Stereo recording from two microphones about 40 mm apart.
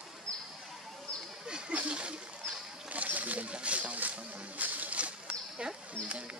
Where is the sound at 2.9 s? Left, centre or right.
Right.